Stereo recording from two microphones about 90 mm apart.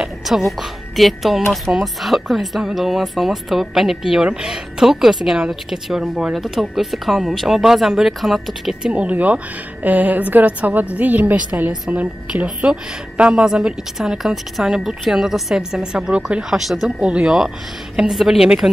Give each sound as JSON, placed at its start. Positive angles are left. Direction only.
{"t": 0.0, "sound": "a sound", "side_deg": 0}
{"t": 0.5, "sound": "speech", "side_deg": 0}
{"t": 8.9, "sound": "a woman's voice", "side_deg": -15}